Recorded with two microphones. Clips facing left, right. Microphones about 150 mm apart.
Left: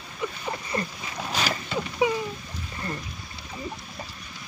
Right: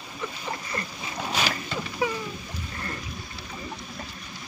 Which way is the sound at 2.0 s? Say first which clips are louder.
Left 4 dB; 15° left (ahead or behind).